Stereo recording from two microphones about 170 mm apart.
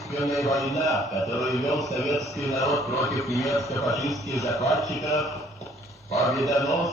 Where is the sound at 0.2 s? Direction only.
20° left (ahead or behind).